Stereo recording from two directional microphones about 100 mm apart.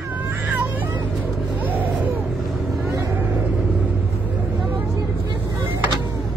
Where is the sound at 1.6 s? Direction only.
15° right (ahead or behind).